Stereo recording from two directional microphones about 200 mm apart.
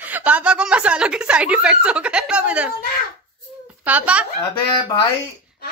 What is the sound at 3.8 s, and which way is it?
Speech, 5° right (ahead or behind).